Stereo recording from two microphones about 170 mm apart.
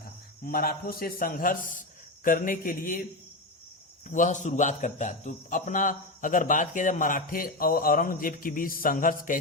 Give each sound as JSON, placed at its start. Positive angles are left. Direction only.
{"t": 0.4, "sound": "a man's voice", "side_deg": 60}
{"t": 4.1, "sound": "a man's voice", "side_deg": 50}